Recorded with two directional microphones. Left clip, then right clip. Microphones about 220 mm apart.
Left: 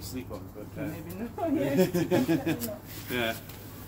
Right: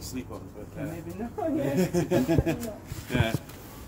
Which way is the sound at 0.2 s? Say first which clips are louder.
Right 2 dB; 50° right (ahead or behind).